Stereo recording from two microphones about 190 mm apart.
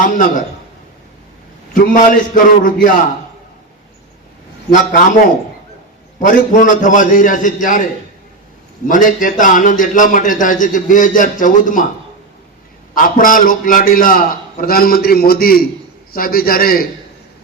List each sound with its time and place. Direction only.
0.0 s a man's voice: 45° left (ahead or behind)
1.7 s a man's voice: 45° left (ahead or behind)
4.7 s a man's voice: 45° left (ahead or behind)
8.9 s a man's voice: 45° left (ahead or behind)
12.9 s a man's voice: 45° left (ahead or behind)